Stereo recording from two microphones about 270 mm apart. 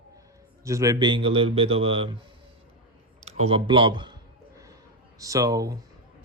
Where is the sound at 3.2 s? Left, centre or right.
Right.